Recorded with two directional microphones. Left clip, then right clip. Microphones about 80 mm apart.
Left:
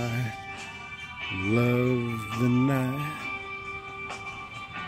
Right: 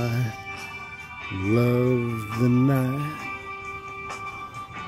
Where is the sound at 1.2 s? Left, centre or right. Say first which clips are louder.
Right 2 dB; left.